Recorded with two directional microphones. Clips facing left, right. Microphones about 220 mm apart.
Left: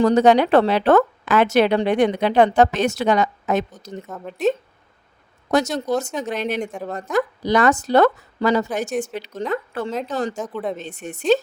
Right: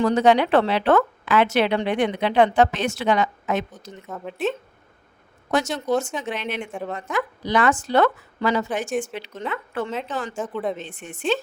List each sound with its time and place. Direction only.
0.0 s a woman's voice: 40° left (ahead or behind)
4.0 s a woman's voice: centre (ahead or behind)
5.5 s a woman's voice: 40° left (ahead or behind)
6.7 s a woman's voice: centre (ahead or behind)
6.9 s a woman's voice: 40° left (ahead or behind)
10.4 s a woman's voice: centre (ahead or behind)
10.8 s a woman's voice: 40° left (ahead or behind)